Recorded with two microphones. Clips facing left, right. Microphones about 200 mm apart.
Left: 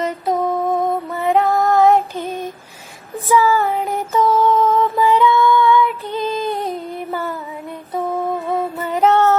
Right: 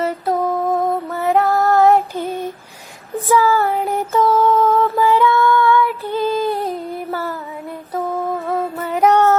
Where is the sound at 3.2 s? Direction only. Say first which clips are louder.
Even; 15° left (ahead or behind).